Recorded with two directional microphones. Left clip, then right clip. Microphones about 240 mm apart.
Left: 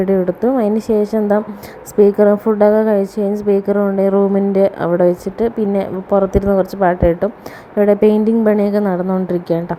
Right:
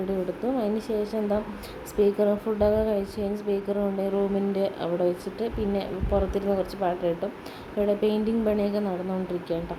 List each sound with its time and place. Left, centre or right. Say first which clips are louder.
0.4 s a woman's voice: left 12 dB; left